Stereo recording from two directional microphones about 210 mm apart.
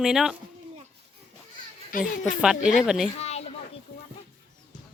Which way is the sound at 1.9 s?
40° left (ahead or behind).